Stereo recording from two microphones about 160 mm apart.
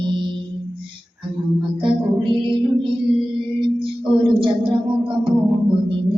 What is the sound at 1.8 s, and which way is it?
Music, 30° right (ahead or behind).